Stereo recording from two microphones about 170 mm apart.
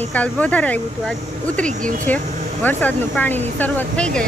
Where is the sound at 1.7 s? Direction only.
50° right (ahead or behind).